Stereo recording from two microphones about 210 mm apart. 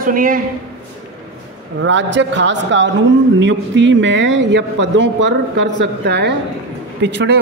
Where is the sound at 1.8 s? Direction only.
60° right (ahead or behind).